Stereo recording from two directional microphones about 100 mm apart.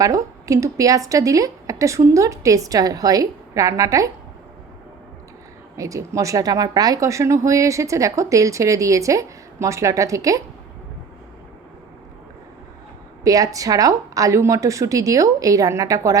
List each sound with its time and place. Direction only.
0.0 s speech: 35° right (ahead or behind)
5.7 s speech: 35° right (ahead or behind)
13.2 s speech: 35° right (ahead or behind)